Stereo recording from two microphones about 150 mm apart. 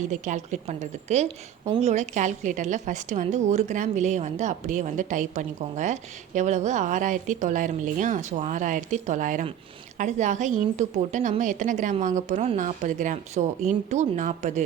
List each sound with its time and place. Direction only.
0.1 s a woman's voice: 55° right (ahead or behind)